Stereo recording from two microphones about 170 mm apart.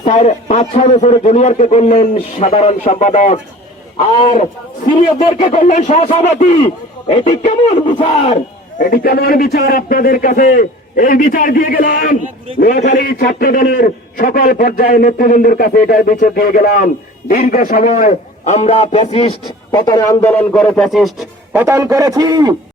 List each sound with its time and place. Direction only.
0.0 s a man's voice: 40° left (ahead or behind)
5.5 s a man's voice: 50° left (ahead or behind); by 8.4 s 35° left (ahead or behind)
8.8 s a man's voice: 60° left (ahead or behind); by 21.1 s centre (ahead or behind)
21.5 s a man's voice: 15° right (ahead or behind)